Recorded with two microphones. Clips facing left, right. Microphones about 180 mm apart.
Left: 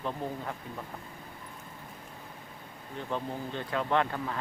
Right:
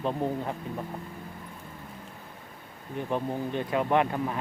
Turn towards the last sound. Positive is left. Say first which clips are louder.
# right 4 dB
turn(degrees=-15)  # may be behind; listen again after turning